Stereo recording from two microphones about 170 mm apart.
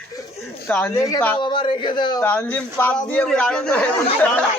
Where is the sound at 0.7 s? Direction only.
10° left (ahead or behind).